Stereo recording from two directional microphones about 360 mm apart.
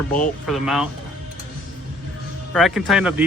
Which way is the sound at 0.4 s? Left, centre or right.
Centre.